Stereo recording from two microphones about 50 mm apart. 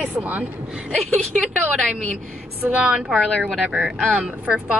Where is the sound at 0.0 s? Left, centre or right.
Right.